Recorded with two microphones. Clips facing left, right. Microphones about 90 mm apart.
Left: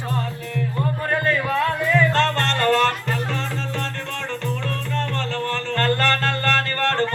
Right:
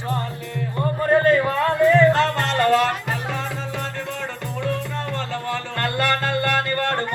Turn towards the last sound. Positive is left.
turn(degrees=-15)  # may be behind; listen again after turning